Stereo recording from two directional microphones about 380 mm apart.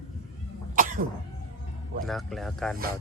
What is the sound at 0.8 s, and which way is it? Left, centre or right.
Cough, right.